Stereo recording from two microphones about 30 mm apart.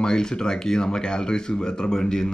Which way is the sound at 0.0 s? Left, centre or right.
Left.